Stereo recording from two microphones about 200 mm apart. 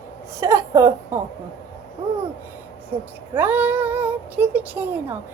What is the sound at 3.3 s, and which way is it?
A woman's voice, 10° right (ahead or behind).